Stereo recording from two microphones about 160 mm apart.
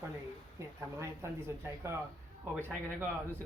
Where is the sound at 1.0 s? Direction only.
15° right (ahead or behind).